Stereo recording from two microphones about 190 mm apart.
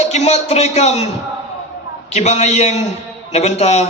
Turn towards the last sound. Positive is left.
turn(degrees=35)  # may be behind; listen again after turning